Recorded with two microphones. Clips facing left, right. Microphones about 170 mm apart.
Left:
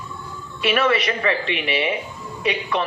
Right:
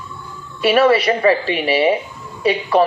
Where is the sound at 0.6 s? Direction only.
35° right (ahead or behind).